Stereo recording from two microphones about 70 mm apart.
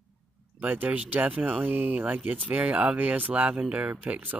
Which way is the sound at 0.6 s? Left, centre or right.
Right.